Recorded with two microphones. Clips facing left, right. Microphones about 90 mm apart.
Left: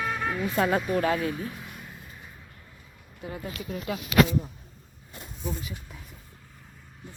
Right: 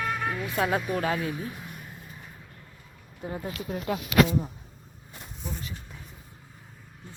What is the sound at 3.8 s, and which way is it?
Speech, 50° right (ahead or behind).